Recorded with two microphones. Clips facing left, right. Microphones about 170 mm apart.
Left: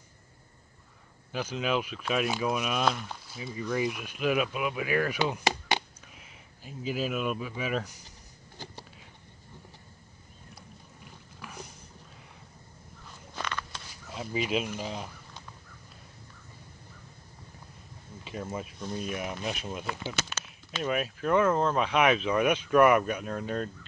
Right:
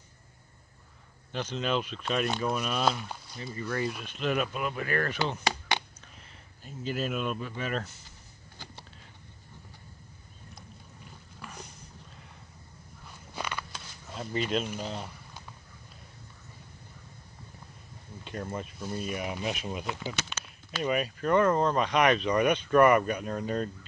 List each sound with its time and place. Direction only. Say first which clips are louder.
1.3 s speech: left 1 dB; 5° left (ahead or behind)
5.2 s speech: left 2 dB; 20° left (ahead or behind)
6.1 s speech: left 1 dB; 5° left (ahead or behind)
11.4 s a sound: left 1 dB; 5° left (ahead or behind)
13.3 s a sound: even; 10° right (ahead or behind); by 14.7 s 5° left (ahead or behind)
14.8 s speech: even; 10° left (ahead or behind)
18.2 s speech: even; 5° left (ahead or behind)